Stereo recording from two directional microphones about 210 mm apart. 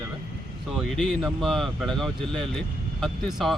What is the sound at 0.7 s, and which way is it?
Speech, centre (ahead or behind).